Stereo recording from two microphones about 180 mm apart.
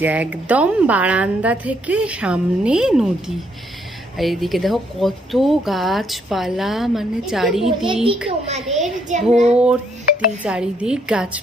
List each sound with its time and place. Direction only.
0.0 s a woman's voice: 10° right (ahead or behind)
8.5 s a child's voice: 40° right (ahead or behind)
9.5 s speech: 5° right (ahead or behind)